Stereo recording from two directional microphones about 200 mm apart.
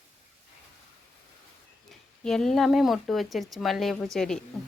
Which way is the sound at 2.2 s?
Centre (ahead or behind).